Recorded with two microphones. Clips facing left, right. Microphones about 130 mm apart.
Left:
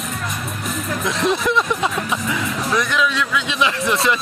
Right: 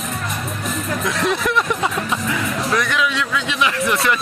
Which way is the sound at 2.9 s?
15° right (ahead or behind).